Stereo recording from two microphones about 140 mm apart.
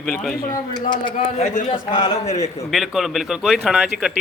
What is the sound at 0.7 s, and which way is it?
Speech, 30° left (ahead or behind).